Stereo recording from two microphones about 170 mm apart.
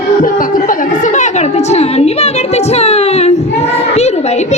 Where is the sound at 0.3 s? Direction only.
50° left (ahead or behind).